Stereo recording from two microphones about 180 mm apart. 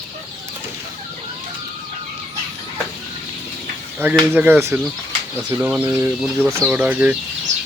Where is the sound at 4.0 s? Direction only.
10° right (ahead or behind).